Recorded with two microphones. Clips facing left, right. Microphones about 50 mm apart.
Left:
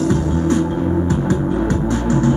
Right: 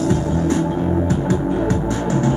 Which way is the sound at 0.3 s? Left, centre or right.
Left.